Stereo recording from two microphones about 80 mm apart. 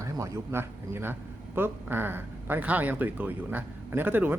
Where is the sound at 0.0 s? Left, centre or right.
Right.